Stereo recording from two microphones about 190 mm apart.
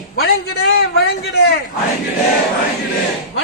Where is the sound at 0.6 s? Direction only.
55° left (ahead or behind).